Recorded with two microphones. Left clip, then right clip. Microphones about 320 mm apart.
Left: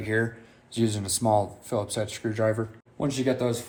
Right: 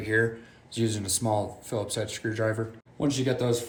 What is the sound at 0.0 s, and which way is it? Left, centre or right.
Speech, centre.